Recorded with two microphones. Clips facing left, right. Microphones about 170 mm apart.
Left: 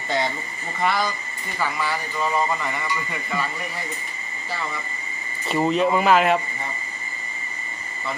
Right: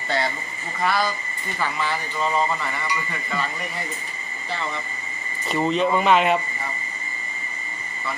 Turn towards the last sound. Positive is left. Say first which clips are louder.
# left 1 dB
turn(degrees=0)  # may be behind; listen again after turning